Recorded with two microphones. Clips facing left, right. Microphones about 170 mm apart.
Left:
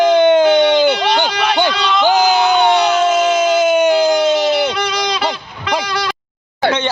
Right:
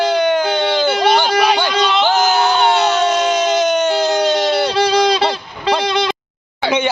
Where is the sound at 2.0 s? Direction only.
15° left (ahead or behind).